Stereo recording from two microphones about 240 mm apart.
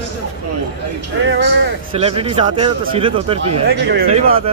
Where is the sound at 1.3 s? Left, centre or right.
Right.